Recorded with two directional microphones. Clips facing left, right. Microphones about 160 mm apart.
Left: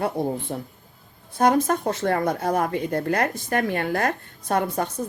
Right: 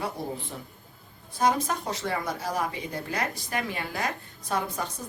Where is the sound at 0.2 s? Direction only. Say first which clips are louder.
Left 9 dB; 55° left (ahead or behind).